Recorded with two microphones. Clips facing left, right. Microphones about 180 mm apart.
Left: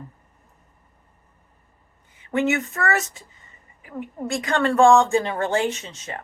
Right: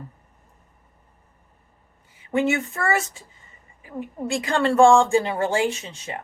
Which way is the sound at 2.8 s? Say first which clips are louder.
Right 1 dB; 10° right (ahead or behind).